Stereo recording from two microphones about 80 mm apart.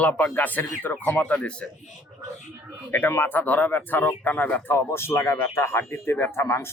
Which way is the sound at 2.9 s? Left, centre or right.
Left.